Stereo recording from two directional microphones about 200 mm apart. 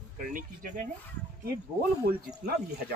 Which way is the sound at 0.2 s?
40° right (ahead or behind).